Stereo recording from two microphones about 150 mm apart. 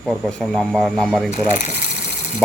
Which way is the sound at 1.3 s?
50° left (ahead or behind).